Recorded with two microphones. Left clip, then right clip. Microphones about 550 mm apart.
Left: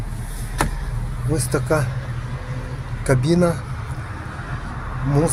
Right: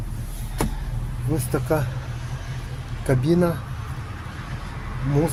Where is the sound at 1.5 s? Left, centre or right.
Right.